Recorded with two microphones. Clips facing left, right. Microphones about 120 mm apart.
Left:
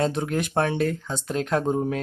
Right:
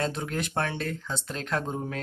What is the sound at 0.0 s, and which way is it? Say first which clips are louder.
Speech: left 6 dB; 20° left (ahead or behind).